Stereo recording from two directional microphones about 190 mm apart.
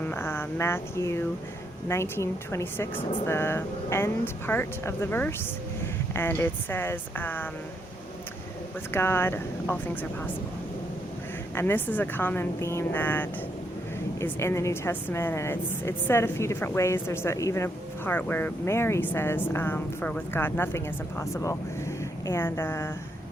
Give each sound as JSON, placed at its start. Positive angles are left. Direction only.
{"t": 0.0, "sound": "a woman's voice", "side_deg": 10}
{"t": 8.9, "sound": "a woman's voice", "side_deg": 10}
{"t": 11.5, "sound": "a woman's voice", "side_deg": 10}